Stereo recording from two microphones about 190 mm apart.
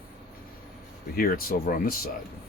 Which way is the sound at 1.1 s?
50° left (ahead or behind).